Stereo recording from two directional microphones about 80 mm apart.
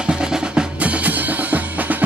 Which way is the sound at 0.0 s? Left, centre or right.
Centre.